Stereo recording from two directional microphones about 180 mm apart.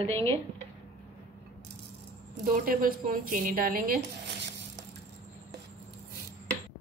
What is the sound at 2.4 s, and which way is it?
A woman's voice, 50° right (ahead or behind).